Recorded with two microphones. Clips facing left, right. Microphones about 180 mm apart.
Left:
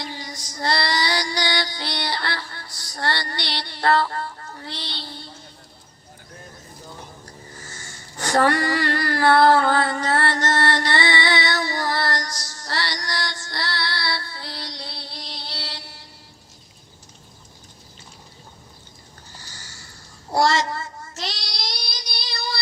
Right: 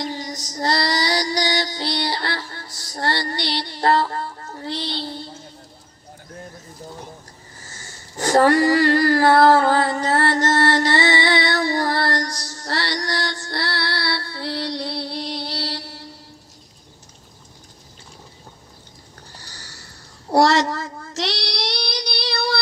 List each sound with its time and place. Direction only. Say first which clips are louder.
0.0 s female singing: right 6 dB; 40° right (ahead or behind)
2.3 s music: right 2 dB; 25° right (ahead or behind)
3.0 s music: right 3 dB; 40° right (ahead or behind)
8.1 s a sound: right 4 dB; 35° right (ahead or behind)
10.5 s mantra: right 3 dB; 25° right (ahead or behind)
10.9 s music: right 3 dB; 20° right (ahead or behind)
11.7 s female singing: right 4 dB; 30° right (ahead or behind)
12.3 s music: right 3 dB; 60° right (ahead or behind)
15.6 s a sound: right 8 dB; 35° right (ahead or behind)
20.3 s child singing: right 4 dB; 65° right (ahead or behind)